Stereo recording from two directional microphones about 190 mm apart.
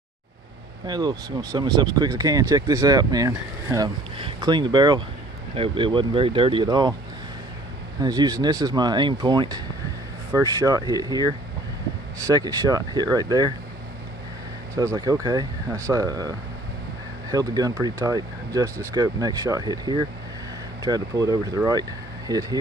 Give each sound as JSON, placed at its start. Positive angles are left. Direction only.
{"t": 0.8, "sound": "speech", "side_deg": -20}
{"t": 8.0, "sound": "speech", "side_deg": -20}
{"t": 14.8, "sound": "speech", "side_deg": -20}